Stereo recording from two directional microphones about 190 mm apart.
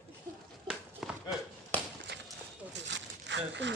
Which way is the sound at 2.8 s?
70° right (ahead or behind).